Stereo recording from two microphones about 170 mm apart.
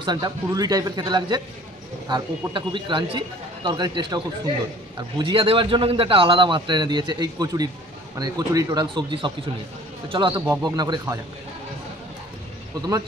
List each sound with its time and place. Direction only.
0.0 s a man's voice: 25° right (ahead or behind)
5.2 s a man's voice: 30° right (ahead or behind)
10.3 s a man's voice: 15° right (ahead or behind)